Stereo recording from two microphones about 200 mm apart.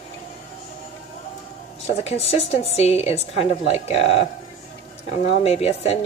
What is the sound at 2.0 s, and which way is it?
A woman's voice, 30° left (ahead or behind).